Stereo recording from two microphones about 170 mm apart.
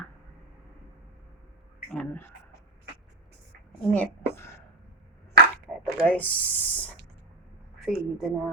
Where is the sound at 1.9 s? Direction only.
10° left (ahead or behind).